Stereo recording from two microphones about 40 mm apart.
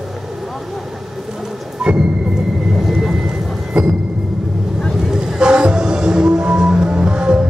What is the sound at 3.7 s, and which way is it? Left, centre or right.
Music, centre.